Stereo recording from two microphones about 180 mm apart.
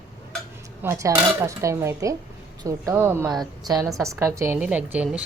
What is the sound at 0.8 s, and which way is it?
A woman's voice, 15° right (ahead or behind).